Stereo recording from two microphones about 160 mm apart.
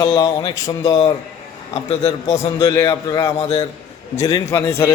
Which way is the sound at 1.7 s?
40° left (ahead or behind).